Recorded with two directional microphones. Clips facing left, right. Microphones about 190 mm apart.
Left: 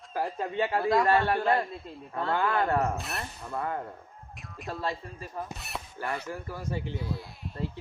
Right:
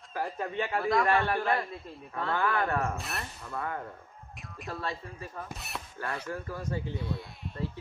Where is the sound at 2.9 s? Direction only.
Centre (ahead or behind).